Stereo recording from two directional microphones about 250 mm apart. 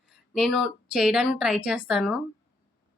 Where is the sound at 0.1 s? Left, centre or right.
Centre.